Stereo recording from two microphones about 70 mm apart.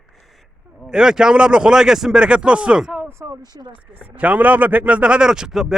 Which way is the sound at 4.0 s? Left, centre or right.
Right.